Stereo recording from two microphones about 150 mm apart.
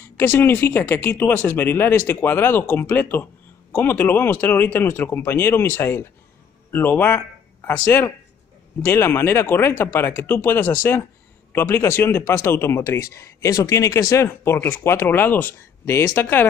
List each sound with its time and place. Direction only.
0.2 s speech: 15° left (ahead or behind)